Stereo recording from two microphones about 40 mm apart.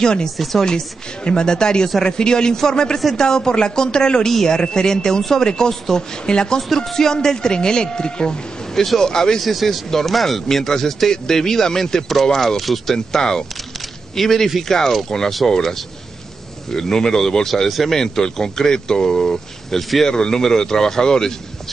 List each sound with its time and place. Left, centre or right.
0.0 s speech: centre
0.4 s speech: centre
1.2 s speech: centre
9.4 s speech: centre
12.9 s speech: centre
13.7 s a sound: centre
14.6 s speech: centre
16.7 s speech: centre
17.6 s speech: centre
17.9 s speech: centre